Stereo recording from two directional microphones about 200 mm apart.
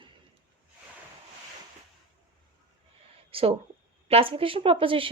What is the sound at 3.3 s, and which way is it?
Speech, 30° right (ahead or behind).